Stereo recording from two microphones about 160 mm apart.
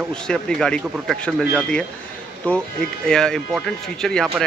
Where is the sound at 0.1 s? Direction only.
5° left (ahead or behind).